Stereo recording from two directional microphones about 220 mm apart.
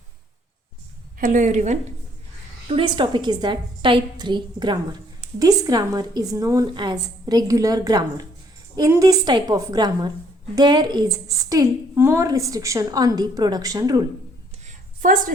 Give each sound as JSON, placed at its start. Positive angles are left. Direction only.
{"t": 1.2, "sound": "a woman's voice", "side_deg": -35}
{"t": 2.6, "sound": "a woman's voice", "side_deg": -20}
{"t": 14.7, "sound": "a sound", "side_deg": -40}